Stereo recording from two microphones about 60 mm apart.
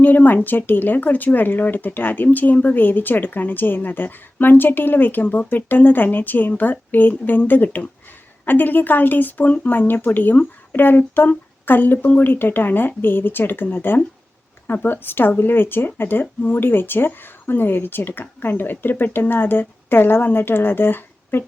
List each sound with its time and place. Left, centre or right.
0.0 s a woman's voice: left